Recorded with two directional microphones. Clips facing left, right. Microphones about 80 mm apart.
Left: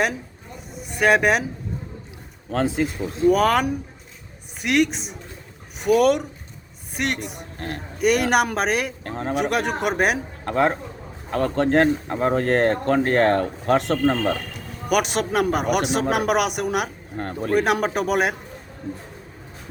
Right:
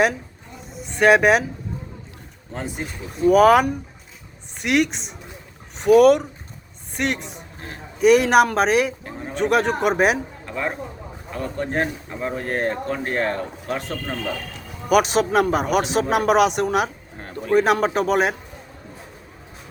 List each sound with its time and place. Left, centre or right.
0.9 s speech: centre
2.5 s speech: left
3.2 s a woman's voice: centre
7.2 s speech: left
8.0 s speech: centre
9.0 s a sound: left
9.3 s speech: centre
10.4 s speech: left
13.7 s speech: left
14.5 s music: centre
15.5 s speech: centre